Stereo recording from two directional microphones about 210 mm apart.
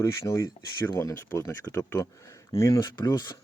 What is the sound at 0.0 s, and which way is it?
Speech, 15° left (ahead or behind).